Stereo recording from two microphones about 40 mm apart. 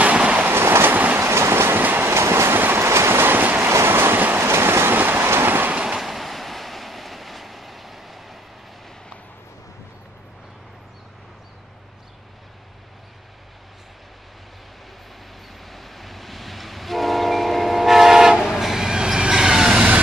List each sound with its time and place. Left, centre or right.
0.0 s train: right
0.5 s train: right
0.9 s train: right
1.2 s train: right
1.8 s train: right
2.0 s train: right
2.6 s vehicle: right
4.4 s train: right
4.9 s train: right
5.9 s train: centre
15.6 s train: centre